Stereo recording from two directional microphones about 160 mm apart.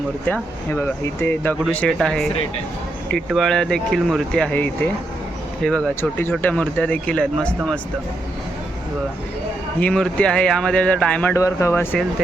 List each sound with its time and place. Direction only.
0.7 s speech: 15° left (ahead or behind)
9.8 s speech: 5° left (ahead or behind)
11.3 s speech: 20° left (ahead or behind)